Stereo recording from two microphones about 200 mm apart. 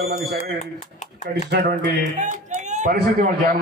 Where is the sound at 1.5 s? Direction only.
55° right (ahead or behind).